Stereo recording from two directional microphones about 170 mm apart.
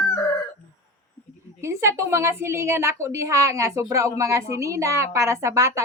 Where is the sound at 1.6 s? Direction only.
15° right (ahead or behind).